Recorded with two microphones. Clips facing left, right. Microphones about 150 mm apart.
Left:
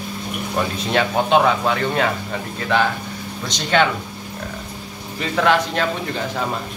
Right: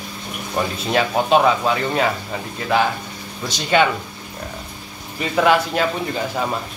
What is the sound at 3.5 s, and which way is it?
Speech, 10° right (ahead or behind).